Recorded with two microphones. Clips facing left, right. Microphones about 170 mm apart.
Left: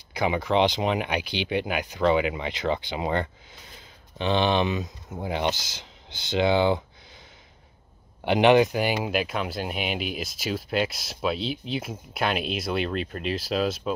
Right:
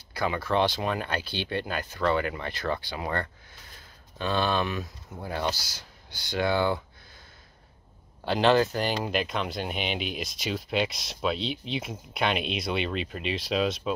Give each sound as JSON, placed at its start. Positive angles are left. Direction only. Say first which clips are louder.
{"t": 0.1, "sound": "speech", "louder": "left 3 dB", "side_deg": 20}
{"t": 8.2, "sound": "speech", "louder": "left 4 dB", "side_deg": 20}